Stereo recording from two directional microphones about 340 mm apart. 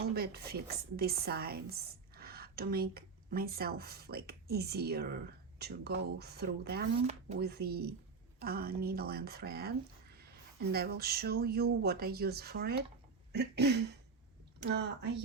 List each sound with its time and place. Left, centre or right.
0.1 s a woman's voice: right